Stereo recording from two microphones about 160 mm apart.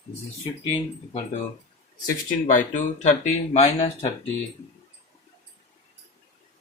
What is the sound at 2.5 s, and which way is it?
Speech, 50° left (ahead or behind).